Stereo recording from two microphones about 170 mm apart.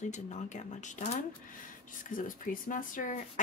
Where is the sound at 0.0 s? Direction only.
45° left (ahead or behind).